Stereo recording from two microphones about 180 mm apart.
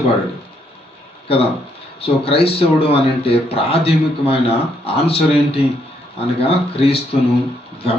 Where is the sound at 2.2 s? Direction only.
30° left (ahead or behind).